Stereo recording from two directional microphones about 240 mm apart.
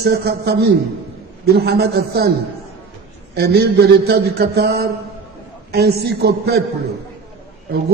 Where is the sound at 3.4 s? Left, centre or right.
Right.